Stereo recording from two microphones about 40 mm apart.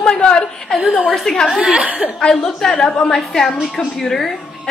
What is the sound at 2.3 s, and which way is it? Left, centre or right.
A woman's voice, centre.